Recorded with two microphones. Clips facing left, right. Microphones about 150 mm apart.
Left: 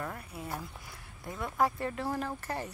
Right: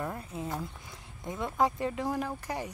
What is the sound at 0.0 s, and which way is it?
Speech, 20° right (ahead or behind).